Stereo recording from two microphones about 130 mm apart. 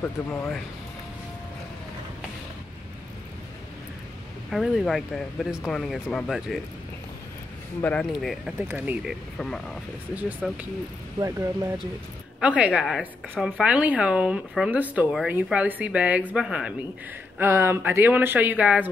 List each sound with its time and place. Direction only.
4.5 s speech: centre (ahead or behind)
7.8 s speech: 10° left (ahead or behind)
8.1 s speech: centre (ahead or behind)
8.6 s speech: 15° right (ahead or behind)
9.4 s speech: 5° left (ahead or behind)
11.1 s speech: 25° right (ahead or behind)
12.4 s speech: 10° right (ahead or behind)
17.4 s speech: 20° right (ahead or behind)